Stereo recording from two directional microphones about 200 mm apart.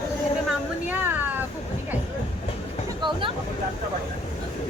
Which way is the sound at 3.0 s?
25° right (ahead or behind).